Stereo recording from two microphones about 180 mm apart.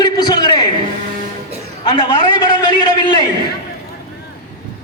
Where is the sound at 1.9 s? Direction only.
25° left (ahead or behind).